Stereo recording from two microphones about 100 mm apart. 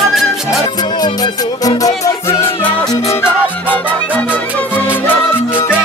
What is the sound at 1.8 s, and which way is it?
Music, 30° left (ahead or behind).